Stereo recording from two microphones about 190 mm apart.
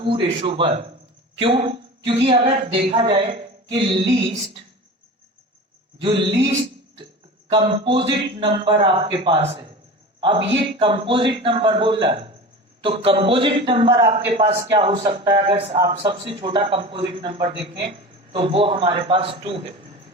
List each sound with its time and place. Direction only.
0.0 s a man's voice: 25° right (ahead or behind)
6.0 s a man's voice: 30° right (ahead or behind)
7.5 s a man's voice: 25° right (ahead or behind)